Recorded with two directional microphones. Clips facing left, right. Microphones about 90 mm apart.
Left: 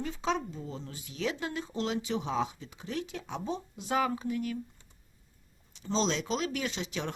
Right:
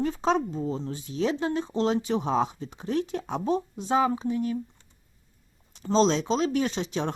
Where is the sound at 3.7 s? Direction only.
30° right (ahead or behind).